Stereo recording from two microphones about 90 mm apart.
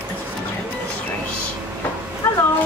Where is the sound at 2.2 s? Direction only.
35° left (ahead or behind).